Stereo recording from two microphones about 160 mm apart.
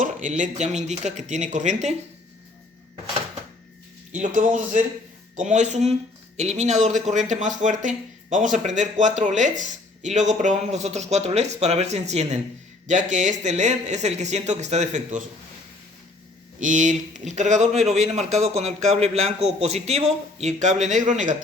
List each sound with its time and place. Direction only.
0.0 s speech: 50° right (ahead or behind)
4.1 s a man's voice: 55° right (ahead or behind)
16.6 s speech: 50° right (ahead or behind)